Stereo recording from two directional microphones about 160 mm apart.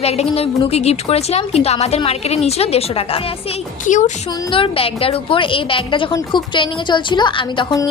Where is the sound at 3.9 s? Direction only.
50° left (ahead or behind).